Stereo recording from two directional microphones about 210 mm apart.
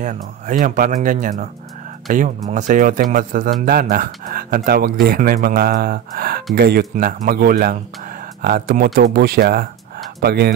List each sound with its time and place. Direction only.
0.0 s a man's voice: 35° right (ahead or behind)